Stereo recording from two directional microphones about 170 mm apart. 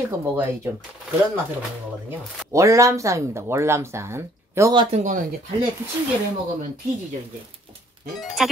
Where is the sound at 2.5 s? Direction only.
20° right (ahead or behind).